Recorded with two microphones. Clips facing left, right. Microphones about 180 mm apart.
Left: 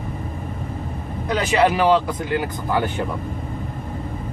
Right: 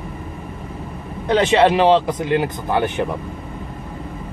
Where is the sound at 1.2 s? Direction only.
25° right (ahead or behind).